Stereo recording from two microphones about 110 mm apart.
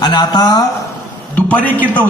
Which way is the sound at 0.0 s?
40° left (ahead or behind).